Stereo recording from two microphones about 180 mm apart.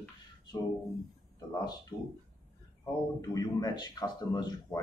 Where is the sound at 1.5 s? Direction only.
20° left (ahead or behind).